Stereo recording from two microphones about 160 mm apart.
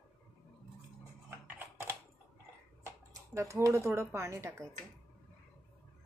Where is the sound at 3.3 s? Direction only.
20° right (ahead or behind).